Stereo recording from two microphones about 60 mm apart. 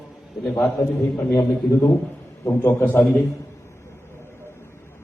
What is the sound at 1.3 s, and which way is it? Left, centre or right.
Speech, left.